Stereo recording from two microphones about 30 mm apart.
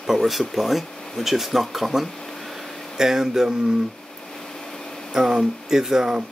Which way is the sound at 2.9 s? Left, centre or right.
Centre.